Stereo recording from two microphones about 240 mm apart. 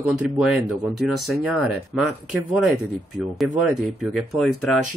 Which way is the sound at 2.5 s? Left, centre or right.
Centre.